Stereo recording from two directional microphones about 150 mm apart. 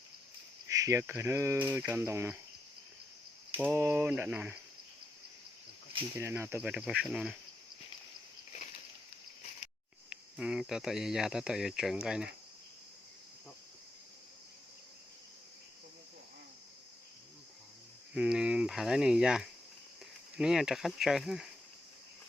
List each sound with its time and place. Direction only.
0.7 s speech: 20° right (ahead or behind)
3.6 s speech: 15° right (ahead or behind)
6.1 s speech: 15° right (ahead or behind)
10.1 s speech: 5° right (ahead or behind)
18.1 s speech: 5° right (ahead or behind)